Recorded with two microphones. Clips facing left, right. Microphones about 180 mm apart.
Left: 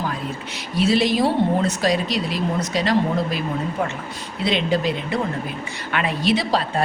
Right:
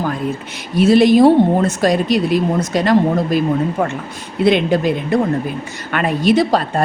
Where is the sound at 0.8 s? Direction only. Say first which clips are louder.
Right 9 dB; 50° right (ahead or behind).